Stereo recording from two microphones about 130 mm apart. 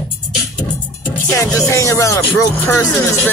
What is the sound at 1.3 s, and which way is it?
Music, 25° left (ahead or behind).